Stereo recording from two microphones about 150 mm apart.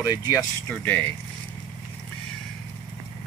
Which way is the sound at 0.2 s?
20° left (ahead or behind).